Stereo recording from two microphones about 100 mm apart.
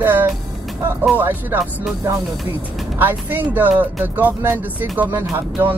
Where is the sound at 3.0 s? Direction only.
20° right (ahead or behind).